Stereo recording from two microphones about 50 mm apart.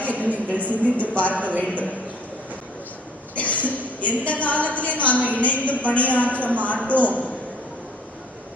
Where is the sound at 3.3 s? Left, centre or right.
Left.